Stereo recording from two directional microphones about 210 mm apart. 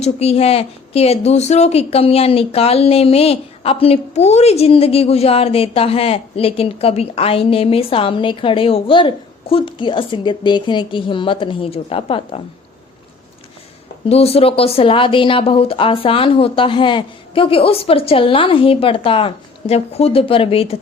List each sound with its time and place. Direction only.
0.0 s a woman's voice: 30° left (ahead or behind)
14.1 s a woman's voice: 30° left (ahead or behind)